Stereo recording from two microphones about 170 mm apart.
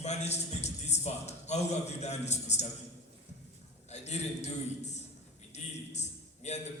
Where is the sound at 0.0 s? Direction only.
40° left (ahead or behind).